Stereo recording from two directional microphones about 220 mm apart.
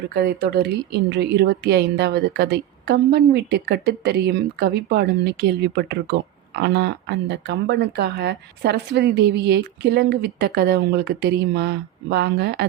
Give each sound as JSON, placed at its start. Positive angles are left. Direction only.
{"t": 0.1, "sound": "speech", "side_deg": -45}